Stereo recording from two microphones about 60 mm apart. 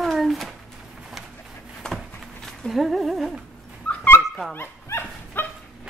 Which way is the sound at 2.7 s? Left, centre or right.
Centre.